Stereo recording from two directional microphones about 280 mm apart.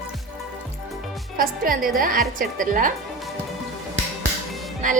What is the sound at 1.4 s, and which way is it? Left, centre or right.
A woman's voice, right.